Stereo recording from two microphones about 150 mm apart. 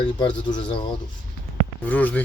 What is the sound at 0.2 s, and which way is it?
Speech, 35° left (ahead or behind).